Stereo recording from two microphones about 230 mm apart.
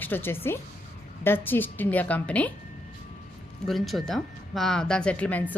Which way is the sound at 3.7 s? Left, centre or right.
Centre.